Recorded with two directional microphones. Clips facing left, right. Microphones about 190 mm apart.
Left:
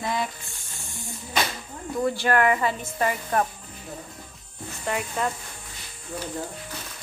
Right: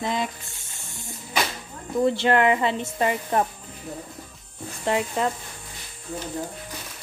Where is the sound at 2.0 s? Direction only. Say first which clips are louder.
Right 2 dB; 20° right (ahead or behind).